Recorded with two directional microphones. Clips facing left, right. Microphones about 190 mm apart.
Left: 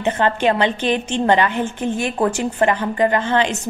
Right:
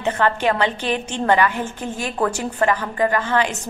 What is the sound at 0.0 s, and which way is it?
A woman's voice, 20° left (ahead or behind).